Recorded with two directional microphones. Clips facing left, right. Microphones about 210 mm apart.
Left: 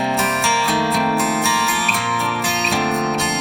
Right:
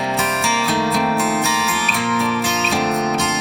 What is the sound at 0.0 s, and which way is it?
Music, centre (ahead or behind).